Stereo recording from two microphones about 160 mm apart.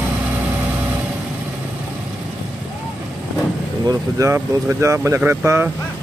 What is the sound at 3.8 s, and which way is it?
Speech, 20° right (ahead or behind).